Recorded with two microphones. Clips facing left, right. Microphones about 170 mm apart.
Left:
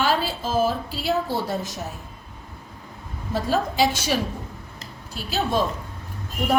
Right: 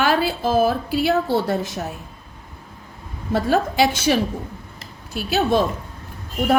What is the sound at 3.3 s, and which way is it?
Speech, 60° right (ahead or behind).